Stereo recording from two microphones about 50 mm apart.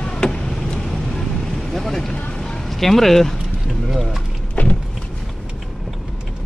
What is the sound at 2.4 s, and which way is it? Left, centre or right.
Music, centre.